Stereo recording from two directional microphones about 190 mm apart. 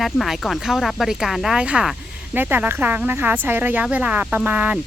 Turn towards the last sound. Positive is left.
turn(degrees=-5)  # may be behind; listen again after turning